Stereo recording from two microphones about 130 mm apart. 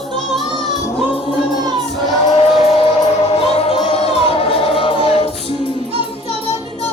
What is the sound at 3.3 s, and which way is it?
Music, 50° left (ahead or behind).